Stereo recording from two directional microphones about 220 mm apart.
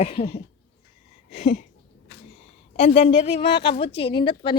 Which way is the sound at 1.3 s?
35° left (ahead or behind).